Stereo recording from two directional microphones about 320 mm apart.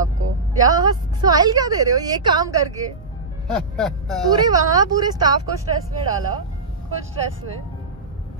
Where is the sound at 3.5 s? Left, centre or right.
Centre.